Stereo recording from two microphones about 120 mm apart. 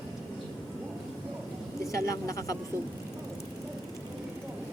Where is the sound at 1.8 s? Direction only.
25° left (ahead or behind).